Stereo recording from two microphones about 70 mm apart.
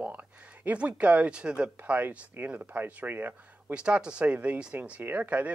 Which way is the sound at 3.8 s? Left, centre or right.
Centre.